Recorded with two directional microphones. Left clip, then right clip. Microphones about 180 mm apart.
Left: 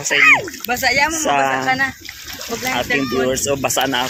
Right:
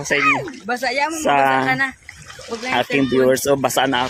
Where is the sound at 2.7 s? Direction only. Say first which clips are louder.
Right 3 dB; 30° right (ahead or behind).